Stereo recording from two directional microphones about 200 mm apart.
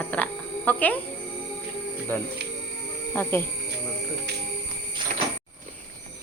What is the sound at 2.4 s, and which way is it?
Music, 55° right (ahead or behind).